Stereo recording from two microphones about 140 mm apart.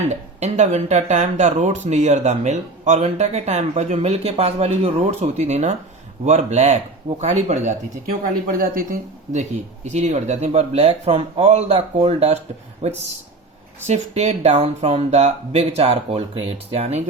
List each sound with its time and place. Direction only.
0.1 s speech: 55° right (ahead or behind)
8.2 s speech: 85° right; by 12.4 s 45° right (ahead or behind)
13.8 s speech: 50° right (ahead or behind)